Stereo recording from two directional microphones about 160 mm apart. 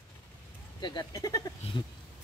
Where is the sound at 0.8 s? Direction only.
25° left (ahead or behind).